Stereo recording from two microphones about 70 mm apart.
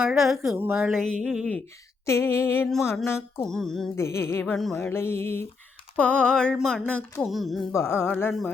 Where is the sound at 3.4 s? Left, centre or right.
Centre.